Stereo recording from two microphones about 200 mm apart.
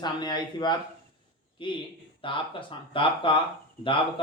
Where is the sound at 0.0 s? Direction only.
20° left (ahead or behind).